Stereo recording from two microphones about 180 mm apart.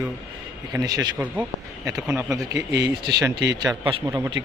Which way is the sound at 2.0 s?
5° right (ahead or behind).